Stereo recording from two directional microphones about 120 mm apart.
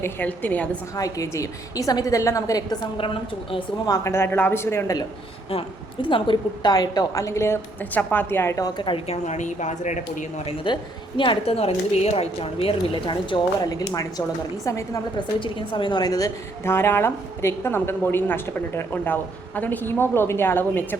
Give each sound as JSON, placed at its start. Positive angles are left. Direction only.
{"t": 0.0, "sound": "a woman's voice", "side_deg": 15}
{"t": 0.9, "sound": "a woman's voice", "side_deg": 30}
{"t": 3.8, "sound": "a woman's voice", "side_deg": 30}
{"t": 5.5, "sound": "a woman's voice", "side_deg": 50}
{"t": 9.0, "sound": "speech", "side_deg": 75}
{"t": 10.4, "sound": "a woman's voice", "side_deg": 45}
{"t": 15.4, "sound": "a woman's voice", "side_deg": 40}